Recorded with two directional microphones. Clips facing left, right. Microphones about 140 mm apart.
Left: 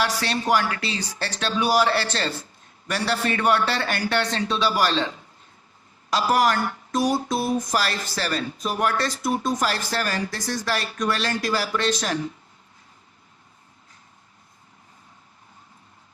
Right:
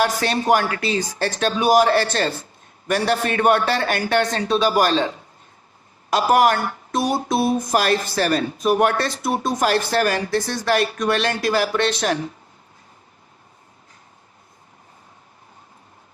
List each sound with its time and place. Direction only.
0.0 s a man's voice: 50° right (ahead or behind)